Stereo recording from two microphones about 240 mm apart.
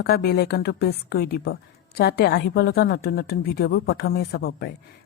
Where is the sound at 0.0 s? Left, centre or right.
Left.